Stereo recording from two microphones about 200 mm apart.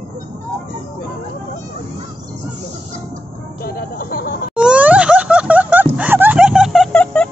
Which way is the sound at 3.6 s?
50° left (ahead or behind).